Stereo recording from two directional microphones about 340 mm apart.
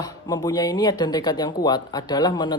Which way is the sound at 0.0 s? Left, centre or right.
Centre.